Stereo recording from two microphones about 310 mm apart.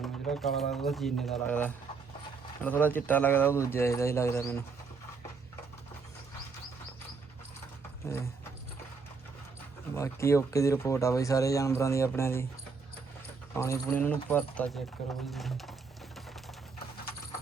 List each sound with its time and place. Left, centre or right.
0.0 s speech: centre
9.9 s speech: centre
13.6 s speech: centre